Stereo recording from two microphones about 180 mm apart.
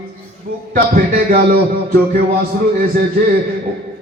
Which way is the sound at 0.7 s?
55° right (ahead or behind).